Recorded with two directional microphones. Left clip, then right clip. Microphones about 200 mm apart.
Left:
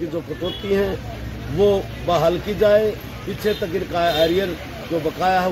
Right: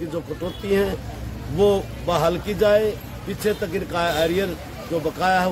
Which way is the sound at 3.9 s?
30° right (ahead or behind).